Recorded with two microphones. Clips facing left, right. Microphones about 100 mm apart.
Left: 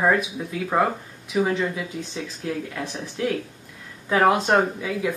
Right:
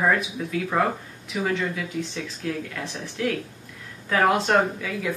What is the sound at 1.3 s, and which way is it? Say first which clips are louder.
Speech: left 3 dB; 25° left (ahead or behind).